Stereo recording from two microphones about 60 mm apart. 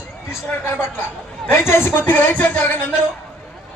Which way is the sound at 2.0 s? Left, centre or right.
Left.